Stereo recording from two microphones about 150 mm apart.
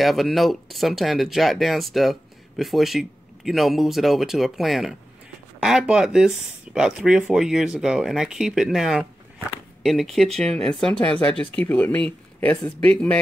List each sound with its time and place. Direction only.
0.0 s speech: centre (ahead or behind)